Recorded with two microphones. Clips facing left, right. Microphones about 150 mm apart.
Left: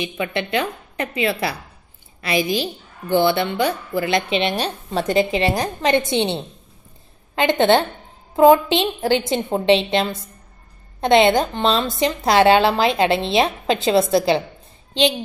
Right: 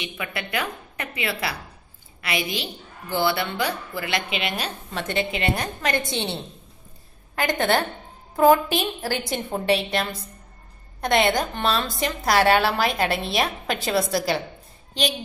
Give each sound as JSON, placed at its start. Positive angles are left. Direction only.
{"t": 0.0, "sound": "speech", "side_deg": 25}